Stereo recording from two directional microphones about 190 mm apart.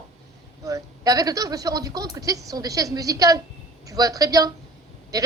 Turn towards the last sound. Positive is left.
turn(degrees=-20)  # may be behind; listen again after turning